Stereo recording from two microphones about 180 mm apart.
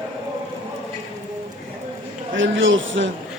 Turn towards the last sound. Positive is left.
turn(degrees=-90)